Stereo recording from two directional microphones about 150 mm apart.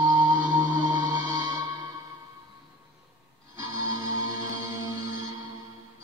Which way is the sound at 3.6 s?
30° right (ahead or behind).